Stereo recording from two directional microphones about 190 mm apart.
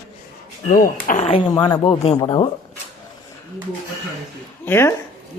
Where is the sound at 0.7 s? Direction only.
45° left (ahead or behind).